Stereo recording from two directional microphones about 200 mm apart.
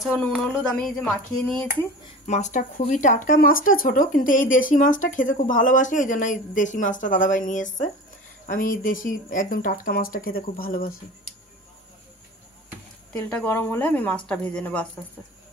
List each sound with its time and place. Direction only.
0.3 s speech: centre (ahead or behind)
2.2 s speech: 35° left (ahead or behind)
13.4 s speech: 10° left (ahead or behind)